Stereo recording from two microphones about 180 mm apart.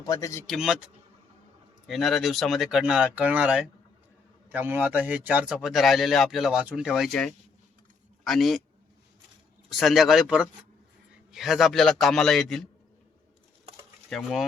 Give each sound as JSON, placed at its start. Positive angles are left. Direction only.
{"t": 0.0, "sound": "speech", "side_deg": 20}
{"t": 0.4, "sound": "speech", "side_deg": 0}
{"t": 1.9, "sound": "a man's voice", "side_deg": 0}
{"t": 9.7, "sound": "speech", "side_deg": 0}
{"t": 14.1, "sound": "speech", "side_deg": 0}